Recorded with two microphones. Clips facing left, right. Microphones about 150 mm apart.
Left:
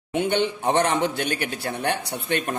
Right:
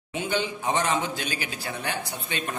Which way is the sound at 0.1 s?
65° left (ahead or behind).